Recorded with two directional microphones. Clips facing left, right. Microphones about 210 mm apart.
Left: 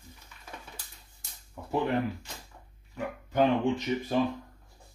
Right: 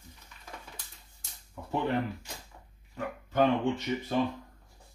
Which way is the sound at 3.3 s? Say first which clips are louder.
Left 1 dB; 15° left (ahead or behind).